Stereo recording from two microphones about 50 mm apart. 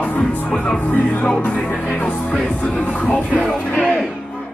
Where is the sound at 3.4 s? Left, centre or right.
Centre.